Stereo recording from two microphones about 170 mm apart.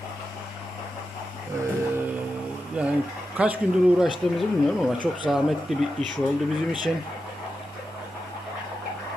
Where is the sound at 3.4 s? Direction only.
5° right (ahead or behind).